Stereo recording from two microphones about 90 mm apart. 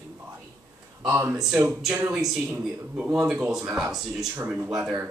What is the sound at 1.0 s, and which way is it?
Speech, 35° right (ahead or behind).